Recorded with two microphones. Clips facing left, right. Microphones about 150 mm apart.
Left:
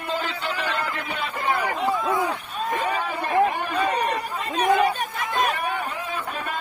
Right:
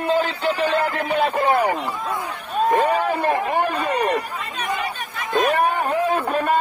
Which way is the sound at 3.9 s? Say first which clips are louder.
Right 4 dB; 35° right (ahead or behind).